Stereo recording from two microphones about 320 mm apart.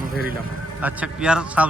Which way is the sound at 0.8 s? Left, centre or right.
Centre.